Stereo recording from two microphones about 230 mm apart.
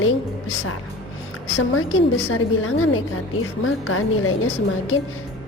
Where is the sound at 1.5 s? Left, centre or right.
Left.